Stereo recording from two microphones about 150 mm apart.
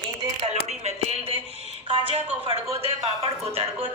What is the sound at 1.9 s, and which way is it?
A woman's voice, 35° right (ahead or behind).